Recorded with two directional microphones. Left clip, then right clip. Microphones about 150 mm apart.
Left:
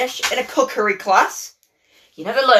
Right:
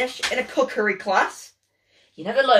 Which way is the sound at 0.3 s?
15° right (ahead or behind).